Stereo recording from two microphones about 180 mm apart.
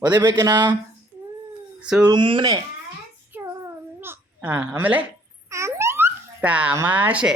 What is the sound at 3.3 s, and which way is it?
Babbling, 15° right (ahead or behind).